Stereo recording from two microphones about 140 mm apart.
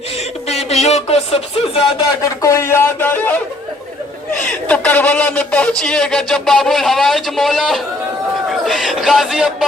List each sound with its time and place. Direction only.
0.4 s speech: 50° left (ahead or behind)
2.0 s speech: 25° left (ahead or behind)
4.7 s a sound: 10° left (ahead or behind)
8.4 s speech: centre (ahead or behind)